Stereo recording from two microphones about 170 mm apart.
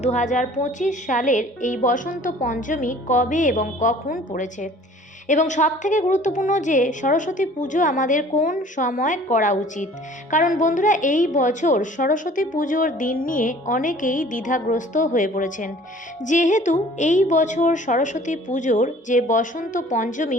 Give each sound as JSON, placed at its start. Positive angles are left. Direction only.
{"t": 0.0, "sound": "a woman's voice", "side_deg": 45}